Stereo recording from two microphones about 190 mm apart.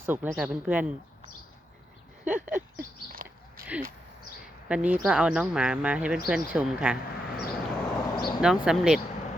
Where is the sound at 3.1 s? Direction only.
50° right (ahead or behind).